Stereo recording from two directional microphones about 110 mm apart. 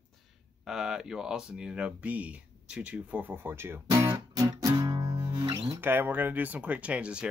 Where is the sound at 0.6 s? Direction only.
5° right (ahead or behind); by 5.7 s 35° right (ahead or behind).